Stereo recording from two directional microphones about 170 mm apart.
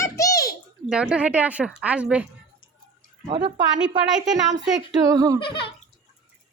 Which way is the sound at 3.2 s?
30° right (ahead or behind).